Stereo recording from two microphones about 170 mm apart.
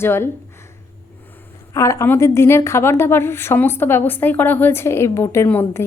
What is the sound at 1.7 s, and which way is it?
A woman's voice, 15° left (ahead or behind).